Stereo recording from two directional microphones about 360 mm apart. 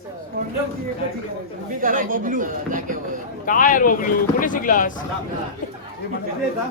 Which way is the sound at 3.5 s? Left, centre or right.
Left.